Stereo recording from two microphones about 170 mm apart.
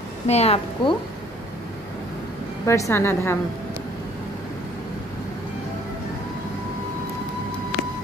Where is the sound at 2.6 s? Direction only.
15° left (ahead or behind).